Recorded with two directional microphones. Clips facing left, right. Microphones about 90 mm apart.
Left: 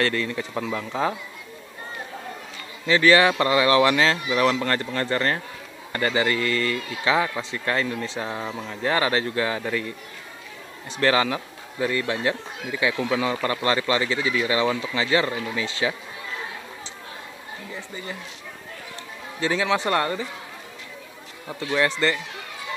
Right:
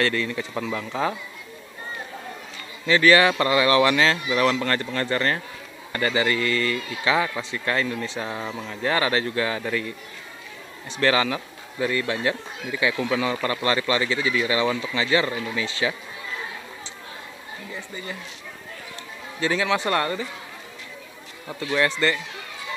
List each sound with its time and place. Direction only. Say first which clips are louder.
0.0 s speech: even; 35° left (ahead or behind)
2.9 s speech: even; 20° left (ahead or behind)
10.9 s speech: even; 35° left (ahead or behind)
19.4 s speech: even; 25° left (ahead or behind)
21.7 s speech: even; 20° left (ahead or behind)